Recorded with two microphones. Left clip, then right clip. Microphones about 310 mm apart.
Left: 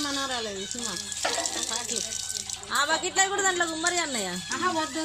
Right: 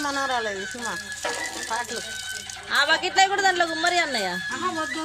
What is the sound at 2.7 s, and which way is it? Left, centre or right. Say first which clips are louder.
Speech: right 5 dB; right.